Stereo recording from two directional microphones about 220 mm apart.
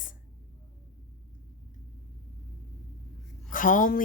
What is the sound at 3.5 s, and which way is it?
Speech, 40° left (ahead or behind).